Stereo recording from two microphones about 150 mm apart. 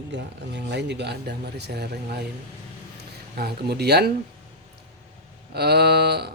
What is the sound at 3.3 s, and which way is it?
Speech, 90° right.